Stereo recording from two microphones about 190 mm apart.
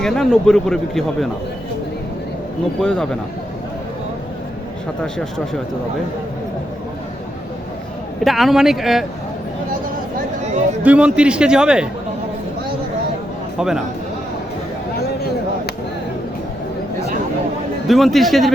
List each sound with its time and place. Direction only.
0.0 s a man's voice: centre (ahead or behind)
2.8 s a man's voice: 5° left (ahead or behind)
8.2 s a man's voice: centre (ahead or behind)
10.8 s a man's voice: 5° right (ahead or behind)
13.6 s a man's voice: 5° right (ahead or behind)
14.9 s a sound: 55° left (ahead or behind)
17.8 s a man's voice: centre (ahead or behind)